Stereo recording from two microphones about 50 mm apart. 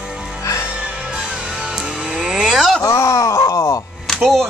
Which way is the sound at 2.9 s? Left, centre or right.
Left.